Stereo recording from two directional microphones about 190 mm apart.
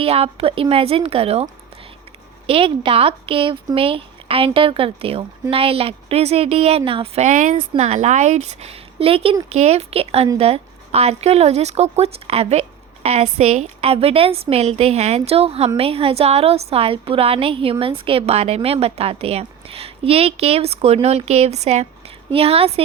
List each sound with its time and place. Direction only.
0.0 s a woman's voice: 30° right (ahead or behind)
2.5 s speech: 30° right (ahead or behind)
7.5 s a woman's voice: 30° right (ahead or behind)